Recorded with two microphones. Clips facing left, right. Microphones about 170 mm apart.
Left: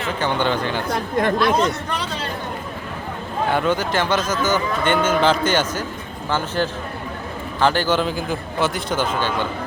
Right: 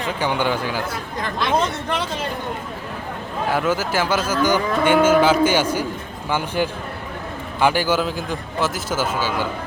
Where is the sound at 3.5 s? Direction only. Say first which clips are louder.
Even; 5° right (ahead or behind).